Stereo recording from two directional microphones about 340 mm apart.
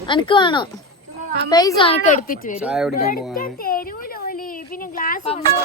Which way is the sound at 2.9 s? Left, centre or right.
Left.